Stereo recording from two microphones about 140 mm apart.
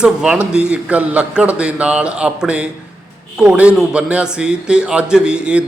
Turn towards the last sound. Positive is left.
turn(degrees=-5)  # may be behind; listen again after turning